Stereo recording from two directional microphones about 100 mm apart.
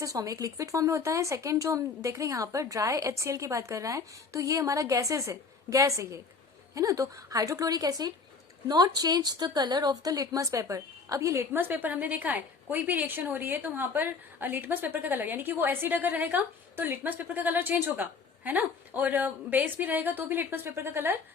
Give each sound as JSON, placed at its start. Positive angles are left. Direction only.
{"t": 0.0, "sound": "a woman's voice", "side_deg": -35}